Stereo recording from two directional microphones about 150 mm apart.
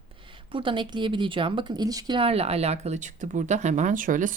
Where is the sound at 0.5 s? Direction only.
35° right (ahead or behind).